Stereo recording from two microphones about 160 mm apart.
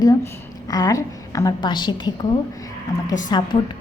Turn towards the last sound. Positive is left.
turn(degrees=25)  # may be behind; listen again after turning